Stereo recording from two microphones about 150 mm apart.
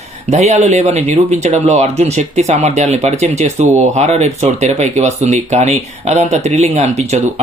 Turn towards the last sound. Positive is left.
turn(degrees=-45)  # may be behind; listen again after turning